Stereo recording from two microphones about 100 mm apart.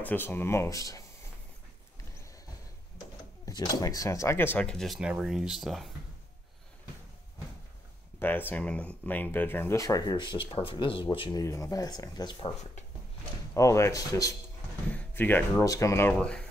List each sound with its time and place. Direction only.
0.0 s speech: 20° left (ahead or behind)
3.4 s speech: 40° left (ahead or behind); by 4.6 s 20° left (ahead or behind)
4.6 s speech: 5° left (ahead or behind)
8.2 s speech: 20° left (ahead or behind)
9.8 s speech: 35° left (ahead or behind)
10.1 s speech: 55° left (ahead or behind)
11.3 s speech: 30° left (ahead or behind)
13.6 s speech: 30° left (ahead or behind)
14.9 s speech: 15° left (ahead or behind)
15.6 s speech: 35° left (ahead or behind)
16.1 s speech: 10° left (ahead or behind)